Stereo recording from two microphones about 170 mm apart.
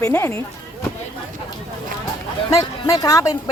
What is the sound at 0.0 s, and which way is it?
Speech, 15° left (ahead or behind).